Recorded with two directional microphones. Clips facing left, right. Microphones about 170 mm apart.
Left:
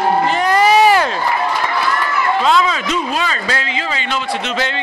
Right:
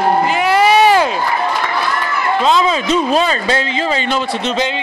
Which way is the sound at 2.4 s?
25° right (ahead or behind).